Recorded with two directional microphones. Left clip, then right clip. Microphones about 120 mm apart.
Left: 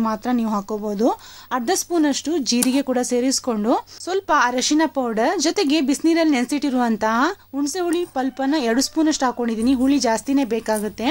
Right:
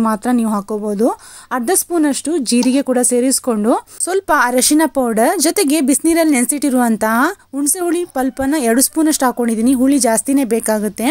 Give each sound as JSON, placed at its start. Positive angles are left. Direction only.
{"t": 0.0, "sound": "speech", "side_deg": -50}